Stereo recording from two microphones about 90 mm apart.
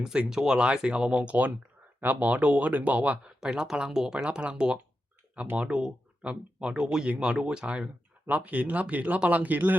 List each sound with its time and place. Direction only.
0.0 s speech: 10° right (ahead or behind)